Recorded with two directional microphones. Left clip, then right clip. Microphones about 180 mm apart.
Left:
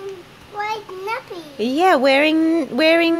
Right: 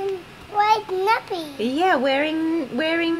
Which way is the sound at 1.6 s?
35° left (ahead or behind).